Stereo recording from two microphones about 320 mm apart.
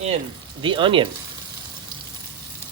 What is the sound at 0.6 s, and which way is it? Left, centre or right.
Speech, centre.